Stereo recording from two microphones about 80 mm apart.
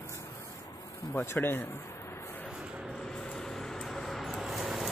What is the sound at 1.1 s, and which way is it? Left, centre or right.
Speech, left.